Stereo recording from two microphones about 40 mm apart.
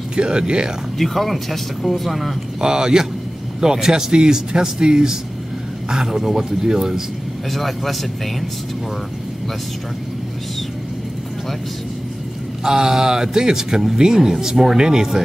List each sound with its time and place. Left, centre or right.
0.1 s speech: right
0.9 s speech: centre
2.6 s speech: centre
7.5 s speech: centre
12.6 s speech: centre